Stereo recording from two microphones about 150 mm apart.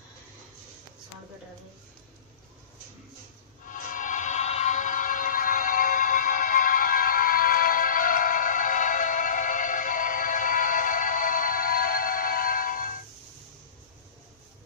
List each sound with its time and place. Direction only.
3.6 s train: 60° left (ahead or behind)